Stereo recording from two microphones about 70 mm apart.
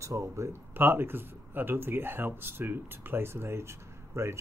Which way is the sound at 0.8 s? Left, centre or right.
Right.